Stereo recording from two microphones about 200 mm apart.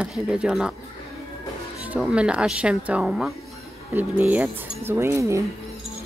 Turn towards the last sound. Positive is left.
turn(degrees=-15)  # may be behind; listen again after turning